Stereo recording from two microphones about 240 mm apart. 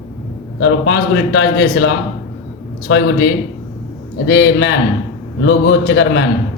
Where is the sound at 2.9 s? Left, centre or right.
Left.